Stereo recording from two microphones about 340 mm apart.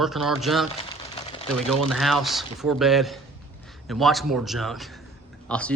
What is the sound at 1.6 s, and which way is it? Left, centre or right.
Speech, centre.